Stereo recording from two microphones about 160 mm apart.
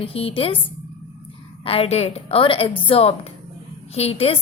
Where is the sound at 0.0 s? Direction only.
35° left (ahead or behind).